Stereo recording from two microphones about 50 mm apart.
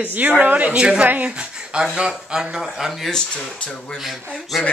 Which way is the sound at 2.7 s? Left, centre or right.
Centre.